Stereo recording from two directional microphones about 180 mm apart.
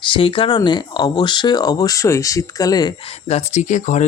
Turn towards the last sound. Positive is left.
turn(degrees=45)  # may be behind; listen again after turning